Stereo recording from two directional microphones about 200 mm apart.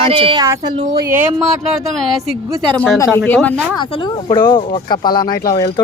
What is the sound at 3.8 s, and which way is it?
Speech, 25° left (ahead or behind).